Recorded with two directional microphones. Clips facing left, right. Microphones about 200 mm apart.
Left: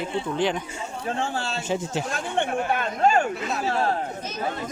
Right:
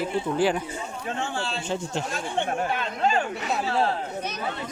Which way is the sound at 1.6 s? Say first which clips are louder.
Left 2 dB; 5° left (ahead or behind).